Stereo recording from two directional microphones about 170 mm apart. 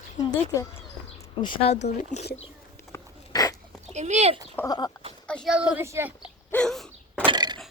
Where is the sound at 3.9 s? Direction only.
40° right (ahead or behind).